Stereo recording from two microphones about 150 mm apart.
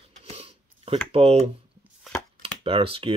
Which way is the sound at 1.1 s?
40° right (ahead or behind).